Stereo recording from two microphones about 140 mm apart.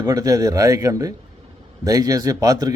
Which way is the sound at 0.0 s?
25° right (ahead or behind).